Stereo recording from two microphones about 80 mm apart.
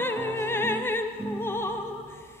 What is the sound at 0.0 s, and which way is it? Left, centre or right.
Music, left.